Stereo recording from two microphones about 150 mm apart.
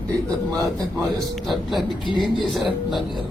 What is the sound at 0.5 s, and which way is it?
Speech, 25° right (ahead or behind).